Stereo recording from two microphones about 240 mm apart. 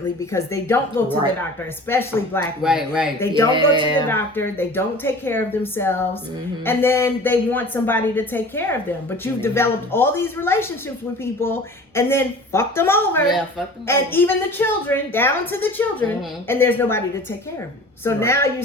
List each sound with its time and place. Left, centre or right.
0.3 s a woman's voice: centre
2.6 s speech: centre
3.2 s a woman's voice: centre
3.5 s speech: centre
4.1 s a woman's voice: centre
18.0 s a woman's voice: centre